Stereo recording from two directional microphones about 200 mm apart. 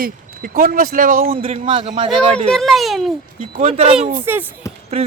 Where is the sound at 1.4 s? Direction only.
30° right (ahead or behind).